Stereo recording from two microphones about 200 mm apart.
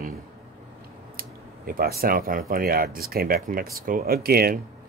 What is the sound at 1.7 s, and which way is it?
Speech, 50° right (ahead or behind).